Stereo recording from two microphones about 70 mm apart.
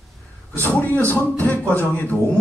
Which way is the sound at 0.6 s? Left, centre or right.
Left.